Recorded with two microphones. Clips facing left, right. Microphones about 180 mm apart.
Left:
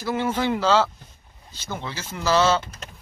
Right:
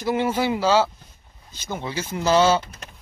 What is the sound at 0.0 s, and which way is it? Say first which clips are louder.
Speech: right 2 dB; 15° right (ahead or behind).